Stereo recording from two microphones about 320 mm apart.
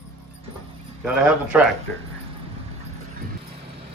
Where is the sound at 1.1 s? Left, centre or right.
Centre.